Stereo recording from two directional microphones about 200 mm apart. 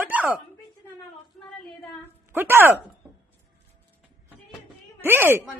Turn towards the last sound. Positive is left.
turn(degrees=-10)  # may be behind; listen again after turning